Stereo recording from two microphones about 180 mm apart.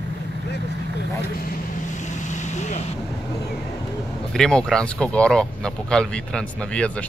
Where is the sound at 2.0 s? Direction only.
40° left (ahead or behind).